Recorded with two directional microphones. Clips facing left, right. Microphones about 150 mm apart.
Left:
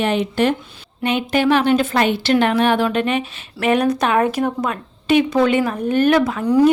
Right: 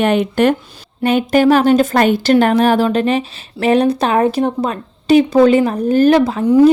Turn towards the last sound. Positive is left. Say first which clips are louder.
# right 4 dB
turn(degrees=-25)  # may be behind; listen again after turning